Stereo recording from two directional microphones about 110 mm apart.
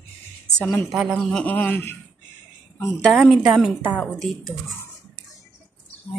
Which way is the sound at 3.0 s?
5° left (ahead or behind).